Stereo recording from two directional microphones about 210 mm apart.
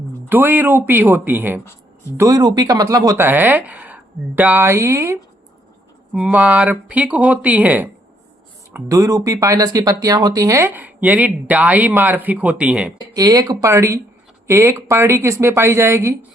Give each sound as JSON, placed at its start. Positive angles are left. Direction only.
{"t": 0.3, "sound": "speech", "side_deg": -10}
{"t": 13.1, "sound": "speech", "side_deg": -15}